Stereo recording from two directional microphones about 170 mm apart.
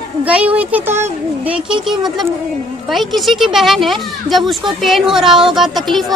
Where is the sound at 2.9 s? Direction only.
Centre (ahead or behind).